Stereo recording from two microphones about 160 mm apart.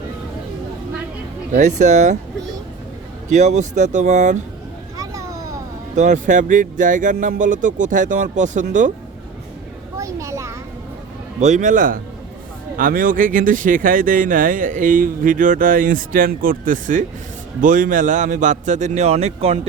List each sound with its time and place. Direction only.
1.5 s speech: 50° right (ahead or behind)
3.3 s speech: 50° right (ahead or behind)
4.9 s vehicle: 20° right (ahead or behind)
6.0 s speech: 50° right (ahead or behind)
10.0 s a sound: 20° right (ahead or behind)
11.3 s speech: 50° right (ahead or behind)